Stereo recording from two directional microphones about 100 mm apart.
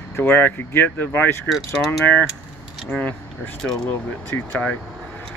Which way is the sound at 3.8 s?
20° left (ahead or behind).